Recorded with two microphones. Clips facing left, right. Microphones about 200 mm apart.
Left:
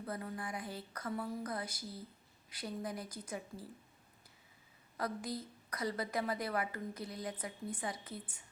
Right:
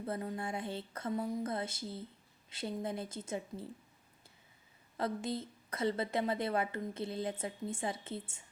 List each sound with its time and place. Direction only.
0.0 s a woman's voice: 25° right (ahead or behind)
4.9 s a woman's voice: 25° right (ahead or behind)